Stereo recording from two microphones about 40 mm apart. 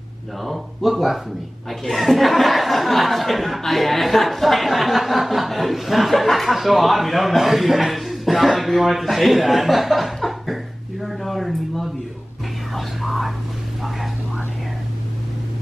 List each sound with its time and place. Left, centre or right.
0.4 s speech: centre
11.1 s a sound: centre
12.7 s whispering: centre